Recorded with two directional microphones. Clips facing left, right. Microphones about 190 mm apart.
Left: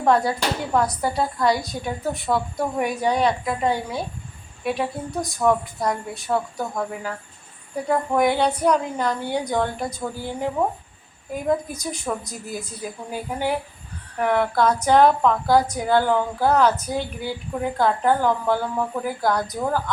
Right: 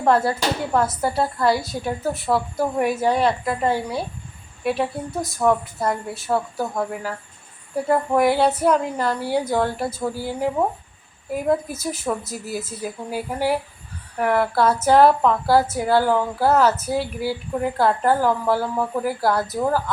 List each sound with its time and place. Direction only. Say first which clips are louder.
0.0 s a woman's voice: right 1 dB; centre (ahead or behind)